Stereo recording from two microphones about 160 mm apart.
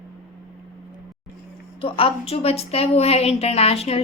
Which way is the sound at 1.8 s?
35° left (ahead or behind).